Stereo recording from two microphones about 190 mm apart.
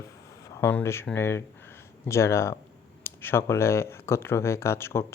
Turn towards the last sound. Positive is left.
turn(degrees=15)  # may be behind; listen again after turning